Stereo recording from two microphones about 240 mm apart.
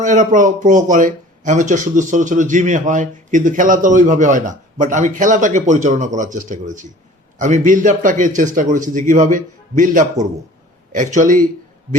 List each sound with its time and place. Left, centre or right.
0.0 s speech: right